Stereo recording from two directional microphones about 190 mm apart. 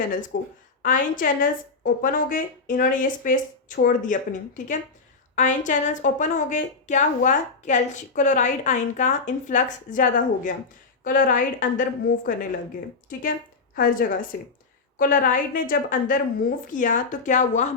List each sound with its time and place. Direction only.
0.3 s speech: 70° left (ahead or behind)
0.8 s a woman's voice: 45° left (ahead or behind)
13.7 s a woman's voice: 45° left (ahead or behind)